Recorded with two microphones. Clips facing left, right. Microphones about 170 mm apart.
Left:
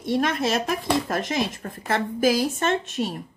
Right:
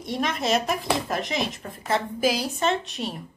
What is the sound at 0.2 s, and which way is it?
A woman's voice, 50° left (ahead or behind).